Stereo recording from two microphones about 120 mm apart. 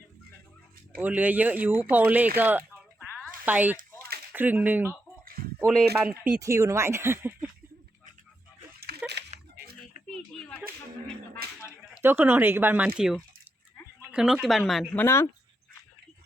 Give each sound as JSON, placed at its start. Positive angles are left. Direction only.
{"t": 0.9, "sound": "speech", "side_deg": -15}
{"t": 5.6, "sound": "speech", "side_deg": 5}
{"t": 6.4, "sound": "speech", "side_deg": -25}
{"t": 10.1, "sound": "a sound", "side_deg": 10}
{"t": 11.9, "sound": "speech", "side_deg": -20}
{"t": 14.9, "sound": "speech", "side_deg": 20}